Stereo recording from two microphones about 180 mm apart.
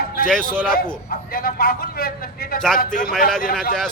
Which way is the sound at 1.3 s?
55° left (ahead or behind).